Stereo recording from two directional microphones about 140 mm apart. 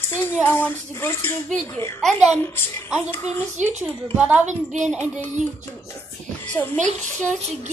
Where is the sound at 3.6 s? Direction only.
60° right (ahead or behind).